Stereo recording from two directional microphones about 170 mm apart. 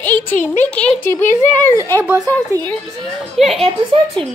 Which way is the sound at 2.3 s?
10° left (ahead or behind).